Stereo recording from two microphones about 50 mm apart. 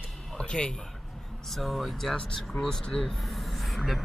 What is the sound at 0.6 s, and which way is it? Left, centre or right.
Speech, centre.